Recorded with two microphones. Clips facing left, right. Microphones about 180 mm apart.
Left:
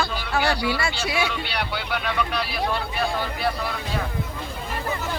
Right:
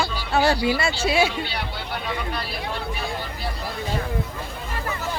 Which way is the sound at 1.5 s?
75° left (ahead or behind).